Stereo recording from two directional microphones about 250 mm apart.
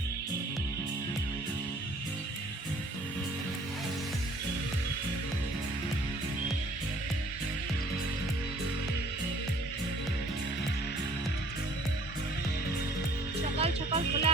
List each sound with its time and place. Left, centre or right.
13.6 s music: right